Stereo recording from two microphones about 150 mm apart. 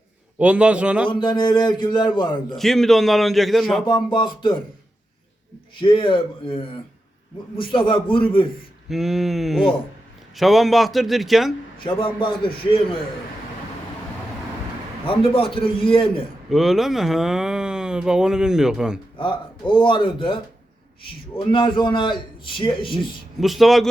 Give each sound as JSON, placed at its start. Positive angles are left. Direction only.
{"t": 0.3, "sound": "a man's voice", "side_deg": -10}
{"t": 1.0, "sound": "a man's voice", "side_deg": 30}
{"t": 2.6, "sound": "speech", "side_deg": 0}
{"t": 3.8, "sound": "a man's voice", "side_deg": 30}
{"t": 5.8, "sound": "a man's voice", "side_deg": 35}
{"t": 8.9, "sound": "speech", "side_deg": 0}
{"t": 11.9, "sound": "a man's voice", "side_deg": 35}
{"t": 15.0, "sound": "a man's voice", "side_deg": 35}
{"t": 16.5, "sound": "speech", "side_deg": 0}
{"t": 19.1, "sound": "a man's voice", "side_deg": 35}
{"t": 23.0, "sound": "speech", "side_deg": 0}